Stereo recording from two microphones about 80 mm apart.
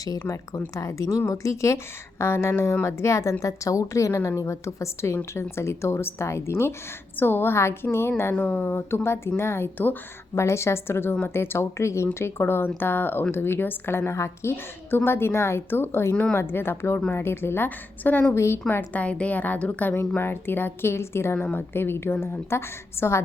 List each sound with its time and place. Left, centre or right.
0.8 s a woman's voice: left
8.4 s speech: centre
9.4 s a woman's voice: left
10.3 s a woman's voice: left
18.3 s a woman's voice: left
18.7 s a woman's voice: left